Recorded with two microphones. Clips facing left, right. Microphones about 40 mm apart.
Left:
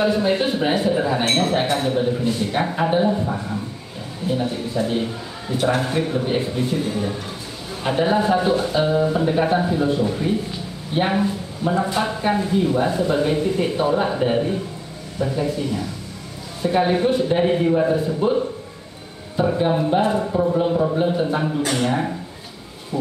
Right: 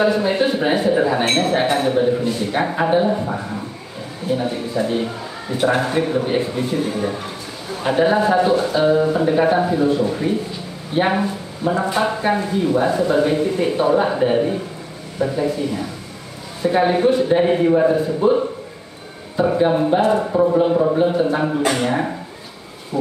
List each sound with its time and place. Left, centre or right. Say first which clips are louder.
0.0 s speech: right 2 dB; centre
19.4 s speech: right 3 dB; centre
20.2 s speech: right 3 dB; centre
20.5 s speech: right 4 dB; centre
21.0 s speech: right 3 dB; centre